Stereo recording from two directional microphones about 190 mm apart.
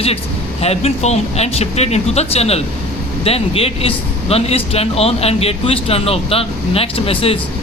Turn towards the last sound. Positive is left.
turn(degrees=30)  # may be behind; listen again after turning